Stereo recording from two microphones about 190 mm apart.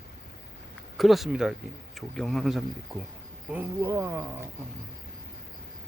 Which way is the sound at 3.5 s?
10° right (ahead or behind).